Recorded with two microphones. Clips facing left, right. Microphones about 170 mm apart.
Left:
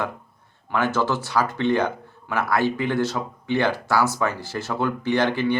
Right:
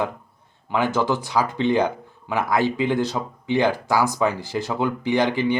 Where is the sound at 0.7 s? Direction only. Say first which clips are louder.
Right 1 dB; 15° right (ahead or behind).